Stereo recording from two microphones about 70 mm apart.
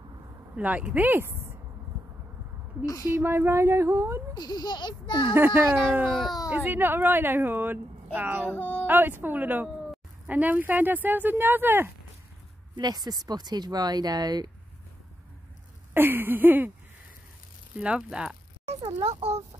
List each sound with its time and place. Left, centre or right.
0.6 s speech: right
2.8 s speech: left
3.1 s speech: right
4.4 s a child's voice: left
5.3 s speech: right
6.0 s a child's voice: centre
6.5 s a woman's voice: right
8.5 s speech: left
8.8 s a woman's voice: right
12.7 s speech: right
15.9 s a woman's voice: right
17.7 s speech: centre